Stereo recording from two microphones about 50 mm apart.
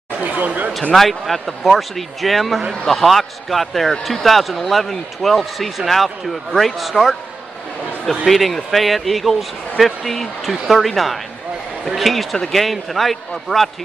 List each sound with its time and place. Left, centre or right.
0.2 s speech: right
0.9 s speech: centre
8.3 s speech: centre